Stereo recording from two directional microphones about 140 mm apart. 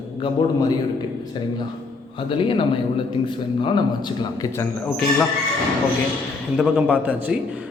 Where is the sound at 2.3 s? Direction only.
40° left (ahead or behind).